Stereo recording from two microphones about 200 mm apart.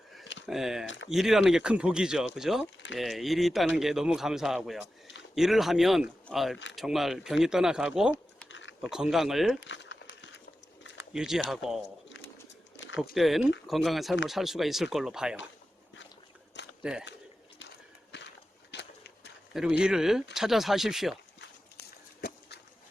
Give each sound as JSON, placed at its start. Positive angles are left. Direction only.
{"t": 0.4, "sound": "speech", "side_deg": 0}
{"t": 0.9, "sound": "speech", "side_deg": 65}
{"t": 1.1, "sound": "speech", "side_deg": 0}
{"t": 8.4, "sound": "a sound", "side_deg": 65}
{"t": 8.8, "sound": "speech", "side_deg": 0}
{"t": 9.6, "sound": "crumpling", "side_deg": 60}
{"t": 11.1, "sound": "speech", "side_deg": -5}
{"t": 12.0, "sound": "a sound", "side_deg": 65}
{"t": 13.1, "sound": "speech", "side_deg": 0}
{"t": 16.8, "sound": "speech", "side_deg": -5}
{"t": 18.7, "sound": "a sound", "side_deg": 60}
{"t": 19.5, "sound": "speech", "side_deg": -5}
{"t": 21.4, "sound": "a sound", "side_deg": 55}